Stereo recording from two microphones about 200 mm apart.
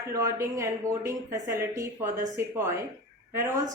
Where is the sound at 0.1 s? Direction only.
15° right (ahead or behind).